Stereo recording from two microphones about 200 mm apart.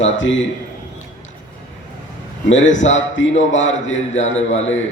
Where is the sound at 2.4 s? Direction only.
70° left (ahead or behind).